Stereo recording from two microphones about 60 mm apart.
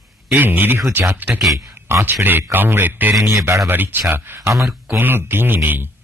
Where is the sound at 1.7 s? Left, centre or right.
Right.